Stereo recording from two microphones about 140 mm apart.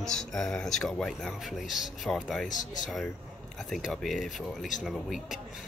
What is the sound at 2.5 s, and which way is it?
Speech, 65° left (ahead or behind).